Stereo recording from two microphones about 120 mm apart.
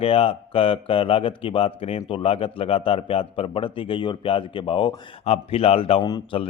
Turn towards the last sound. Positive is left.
turn(degrees=35)  # may be behind; listen again after turning